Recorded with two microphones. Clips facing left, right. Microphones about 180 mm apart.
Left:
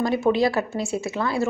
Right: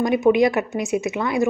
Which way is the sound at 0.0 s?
20° right (ahead or behind).